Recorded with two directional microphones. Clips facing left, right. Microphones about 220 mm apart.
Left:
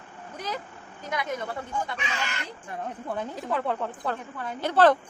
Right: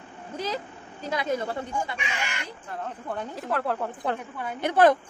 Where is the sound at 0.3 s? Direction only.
30° right (ahead or behind).